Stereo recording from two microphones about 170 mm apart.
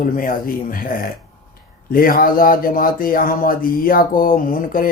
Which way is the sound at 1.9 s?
55° left (ahead or behind).